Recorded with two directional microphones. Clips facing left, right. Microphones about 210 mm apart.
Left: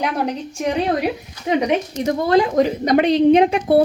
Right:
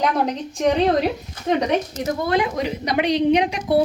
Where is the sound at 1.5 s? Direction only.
10° left (ahead or behind).